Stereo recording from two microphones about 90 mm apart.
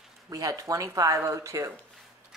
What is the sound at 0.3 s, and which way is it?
Speech, 40° right (ahead or behind).